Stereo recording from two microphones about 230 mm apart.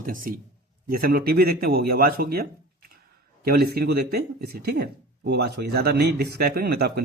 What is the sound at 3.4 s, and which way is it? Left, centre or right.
Speech, right.